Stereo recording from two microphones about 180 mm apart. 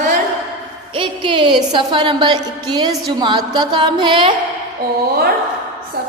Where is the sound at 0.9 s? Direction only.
25° right (ahead or behind).